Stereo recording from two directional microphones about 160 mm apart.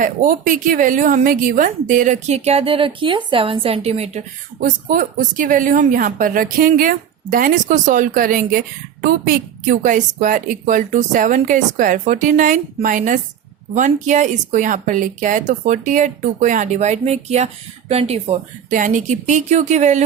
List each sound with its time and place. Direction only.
0.0 s speech: 55° right (ahead or behind)
4.6 s a woman's voice: 60° right (ahead or behind); by 18.3 s 40° right (ahead or behind)
18.7 s speech: 55° right (ahead or behind)